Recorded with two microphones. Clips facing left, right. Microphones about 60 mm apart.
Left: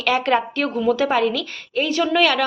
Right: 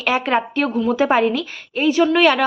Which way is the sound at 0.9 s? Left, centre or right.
Right.